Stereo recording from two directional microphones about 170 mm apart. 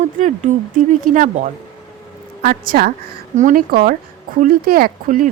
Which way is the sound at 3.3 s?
50° right (ahead or behind).